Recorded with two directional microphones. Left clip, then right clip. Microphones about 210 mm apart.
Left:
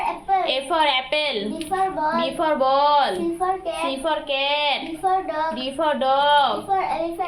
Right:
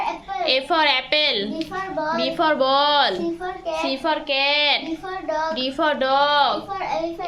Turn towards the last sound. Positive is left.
turn(degrees=-35)  # may be behind; listen again after turning